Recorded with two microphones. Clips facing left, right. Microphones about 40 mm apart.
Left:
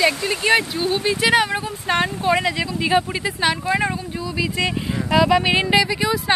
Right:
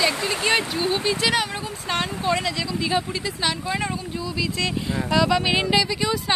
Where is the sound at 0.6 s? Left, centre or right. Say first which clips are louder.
Left 2 dB; left.